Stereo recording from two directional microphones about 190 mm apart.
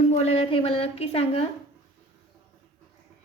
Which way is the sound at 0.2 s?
35° left (ahead or behind).